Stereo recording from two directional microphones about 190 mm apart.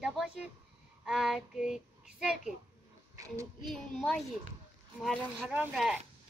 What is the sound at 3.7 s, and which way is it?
A child's voice, centre (ahead or behind).